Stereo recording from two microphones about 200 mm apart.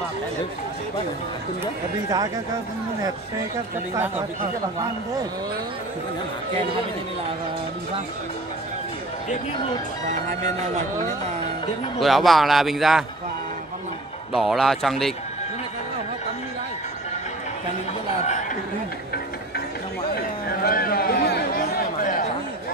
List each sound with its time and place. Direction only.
12.0 s a man's voice: centre (ahead or behind)
14.3 s a man's voice: centre (ahead or behind)
20.2 s chatter: 50° left (ahead or behind)